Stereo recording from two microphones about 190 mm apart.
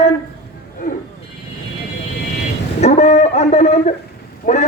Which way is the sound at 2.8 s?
35° left (ahead or behind).